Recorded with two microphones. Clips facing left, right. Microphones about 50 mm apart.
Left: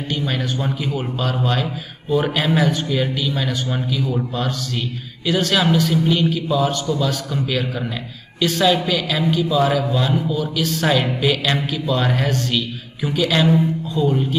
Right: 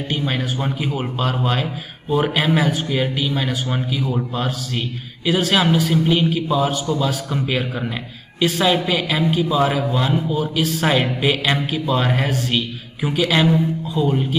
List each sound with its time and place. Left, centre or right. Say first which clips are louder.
0.1 s a man's voice: even; centre
10.6 s a man's voice: even; centre